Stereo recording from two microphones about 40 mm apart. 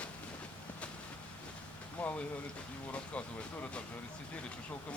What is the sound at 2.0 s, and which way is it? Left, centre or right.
Speech, left.